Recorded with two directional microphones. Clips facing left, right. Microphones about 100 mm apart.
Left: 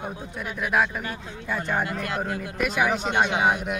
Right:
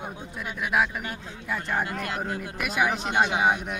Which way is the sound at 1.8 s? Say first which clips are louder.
Left 2 dB; 25° right (ahead or behind).